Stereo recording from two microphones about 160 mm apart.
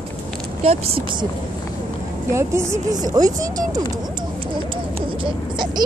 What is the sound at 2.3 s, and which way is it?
A woman's voice, 15° right (ahead or behind).